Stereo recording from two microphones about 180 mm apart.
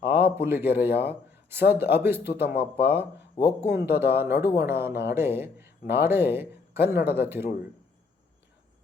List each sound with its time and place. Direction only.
0.0 s speech: 10° right (ahead or behind)
3.4 s speech: 30° left (ahead or behind)
3.8 s speech: 10° right (ahead or behind)